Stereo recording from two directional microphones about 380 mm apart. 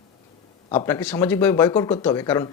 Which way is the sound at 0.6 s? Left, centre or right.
Centre.